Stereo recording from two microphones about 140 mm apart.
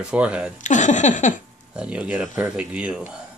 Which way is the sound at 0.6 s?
60° left (ahead or behind).